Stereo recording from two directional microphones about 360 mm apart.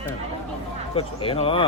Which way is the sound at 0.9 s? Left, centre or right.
Centre.